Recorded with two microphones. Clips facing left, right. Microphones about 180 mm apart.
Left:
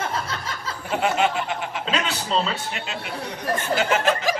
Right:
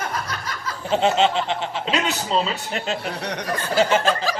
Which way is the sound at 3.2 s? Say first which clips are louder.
Right 4 dB; 75° right (ahead or behind).